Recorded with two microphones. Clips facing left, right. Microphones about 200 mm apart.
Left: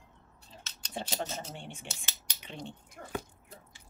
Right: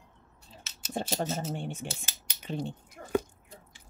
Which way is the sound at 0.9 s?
45° right (ahead or behind).